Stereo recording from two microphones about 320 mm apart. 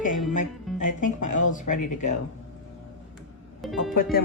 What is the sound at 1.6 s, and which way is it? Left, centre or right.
Speech, left.